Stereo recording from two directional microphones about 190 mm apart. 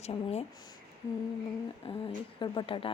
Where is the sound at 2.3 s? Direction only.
25° left (ahead or behind).